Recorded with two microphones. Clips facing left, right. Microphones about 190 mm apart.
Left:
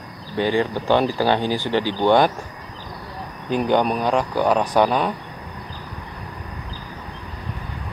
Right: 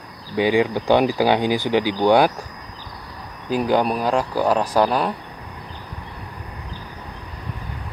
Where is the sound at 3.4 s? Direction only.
5° right (ahead or behind).